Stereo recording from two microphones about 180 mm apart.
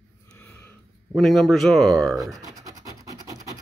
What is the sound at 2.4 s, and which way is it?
Scratch, 20° right (ahead or behind).